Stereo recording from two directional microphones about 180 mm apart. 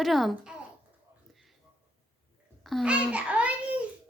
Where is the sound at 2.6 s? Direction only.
5° right (ahead or behind).